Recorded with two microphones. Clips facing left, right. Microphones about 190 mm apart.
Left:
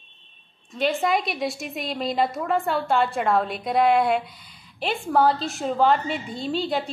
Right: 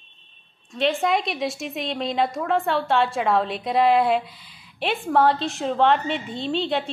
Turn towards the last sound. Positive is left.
turn(degrees=0)  # may be behind; listen again after turning